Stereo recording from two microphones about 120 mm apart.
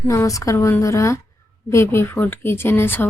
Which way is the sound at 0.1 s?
25° left (ahead or behind).